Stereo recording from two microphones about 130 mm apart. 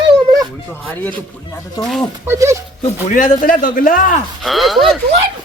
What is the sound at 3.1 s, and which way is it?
A man's voice, 85° left.